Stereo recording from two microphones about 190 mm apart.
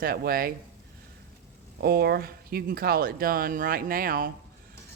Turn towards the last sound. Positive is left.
turn(degrees=-50)  # may be behind; listen again after turning